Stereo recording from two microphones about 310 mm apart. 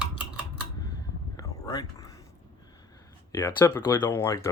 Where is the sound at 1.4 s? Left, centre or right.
Centre.